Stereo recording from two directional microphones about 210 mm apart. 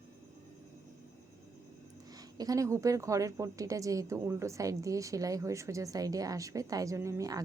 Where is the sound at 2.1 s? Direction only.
15° right (ahead or behind).